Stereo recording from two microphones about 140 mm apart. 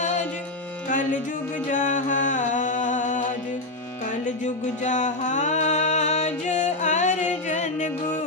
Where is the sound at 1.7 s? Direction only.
60° left (ahead or behind).